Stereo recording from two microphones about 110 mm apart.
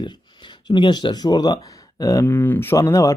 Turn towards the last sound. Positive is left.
turn(degrees=30)  # may be behind; listen again after turning